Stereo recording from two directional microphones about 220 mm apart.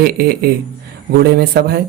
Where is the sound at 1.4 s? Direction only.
45° right (ahead or behind).